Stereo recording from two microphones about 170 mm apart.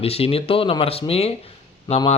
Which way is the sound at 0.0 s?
35° left (ahead or behind).